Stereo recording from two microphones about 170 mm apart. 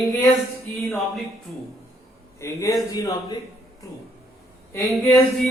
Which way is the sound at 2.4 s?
20° left (ahead or behind).